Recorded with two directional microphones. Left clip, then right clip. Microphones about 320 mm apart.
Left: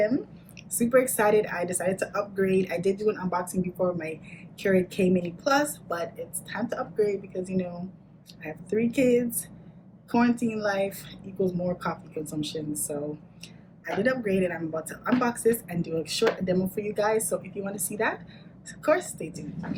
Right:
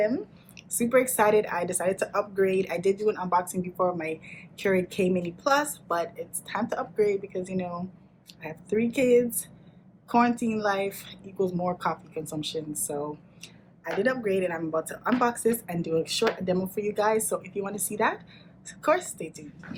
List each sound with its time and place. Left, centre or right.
0.8 s a woman's voice: centre
14.0 s a woman's voice: centre